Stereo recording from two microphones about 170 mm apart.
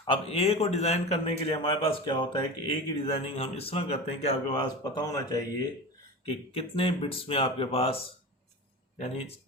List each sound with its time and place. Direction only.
0.0 s a man's voice: 35° left (ahead or behind)
6.2 s a man's voice: 35° left (ahead or behind)